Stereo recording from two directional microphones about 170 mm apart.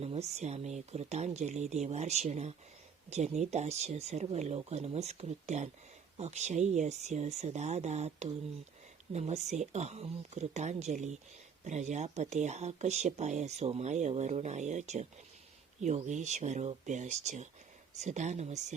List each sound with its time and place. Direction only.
0.0 s speech: 35° right (ahead or behind)